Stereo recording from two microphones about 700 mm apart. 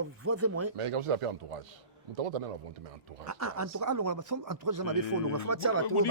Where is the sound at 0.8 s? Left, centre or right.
Right.